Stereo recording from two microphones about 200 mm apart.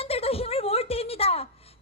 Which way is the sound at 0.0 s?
30° left (ahead or behind).